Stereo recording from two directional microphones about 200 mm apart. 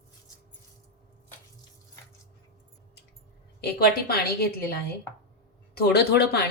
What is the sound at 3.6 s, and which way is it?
A woman's voice, 50° left (ahead or behind).